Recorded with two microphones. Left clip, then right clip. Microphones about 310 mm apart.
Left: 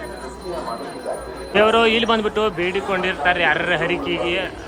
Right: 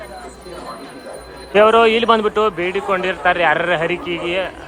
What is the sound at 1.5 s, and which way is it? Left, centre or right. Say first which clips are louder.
A man's voice: right 4 dB; centre.